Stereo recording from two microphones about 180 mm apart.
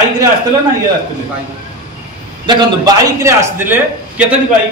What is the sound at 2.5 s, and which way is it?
A man's voice, 20° right (ahead or behind).